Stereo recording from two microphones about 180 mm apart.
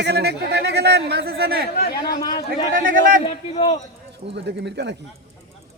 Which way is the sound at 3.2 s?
35° left (ahead or behind).